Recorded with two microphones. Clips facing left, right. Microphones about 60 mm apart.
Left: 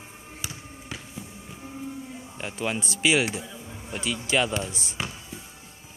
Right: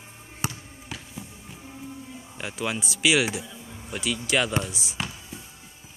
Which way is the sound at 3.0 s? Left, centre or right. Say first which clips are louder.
Right 1 dB; centre.